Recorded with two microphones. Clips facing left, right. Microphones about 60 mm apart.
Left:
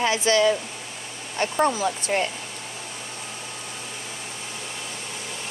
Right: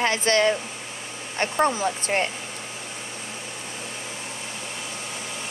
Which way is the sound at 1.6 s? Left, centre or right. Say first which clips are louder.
Even; right.